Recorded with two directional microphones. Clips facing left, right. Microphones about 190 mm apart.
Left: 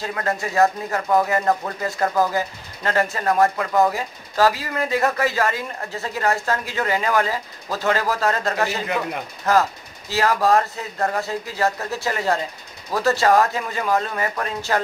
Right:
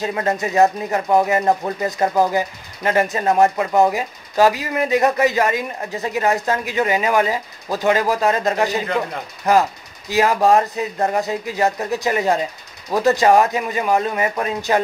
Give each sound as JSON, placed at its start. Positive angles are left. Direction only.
{"t": 0.0, "sound": "speech", "side_deg": -20}